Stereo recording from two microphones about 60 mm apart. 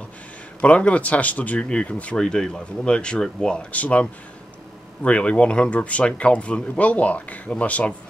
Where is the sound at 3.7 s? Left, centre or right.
Left.